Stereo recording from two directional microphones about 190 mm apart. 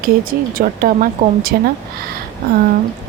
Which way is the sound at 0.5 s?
45° right (ahead or behind).